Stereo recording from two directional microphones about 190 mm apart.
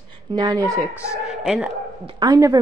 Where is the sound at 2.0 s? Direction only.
20° right (ahead or behind).